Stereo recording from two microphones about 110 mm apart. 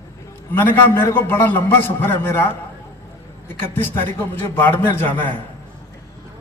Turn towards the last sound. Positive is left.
turn(degrees=15)  # may be behind; listen again after turning